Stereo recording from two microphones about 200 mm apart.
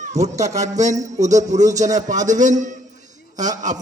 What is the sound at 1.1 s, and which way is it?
A man's voice, 35° right (ahead or behind).